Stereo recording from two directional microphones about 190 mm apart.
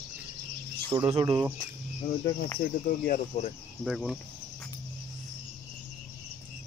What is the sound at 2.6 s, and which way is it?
Speech, 40° left (ahead or behind).